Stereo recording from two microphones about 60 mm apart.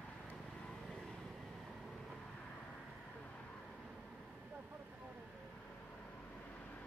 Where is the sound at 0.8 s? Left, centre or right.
Centre.